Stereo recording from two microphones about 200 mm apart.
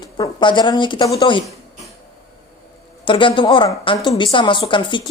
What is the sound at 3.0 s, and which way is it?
A woman's voice, 25° left (ahead or behind).